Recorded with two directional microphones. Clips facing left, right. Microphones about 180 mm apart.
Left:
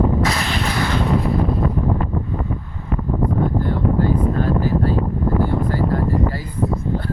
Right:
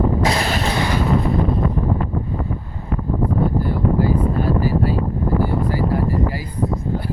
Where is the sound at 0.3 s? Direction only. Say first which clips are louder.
Right 2 dB; 35° right (ahead or behind).